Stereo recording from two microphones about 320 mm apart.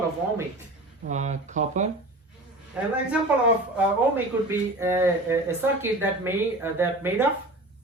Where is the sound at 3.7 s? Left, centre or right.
Centre.